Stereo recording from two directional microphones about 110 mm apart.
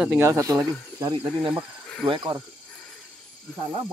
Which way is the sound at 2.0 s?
50° right (ahead or behind).